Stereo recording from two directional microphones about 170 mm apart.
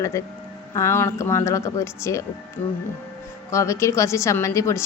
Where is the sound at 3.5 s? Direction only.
15° left (ahead or behind).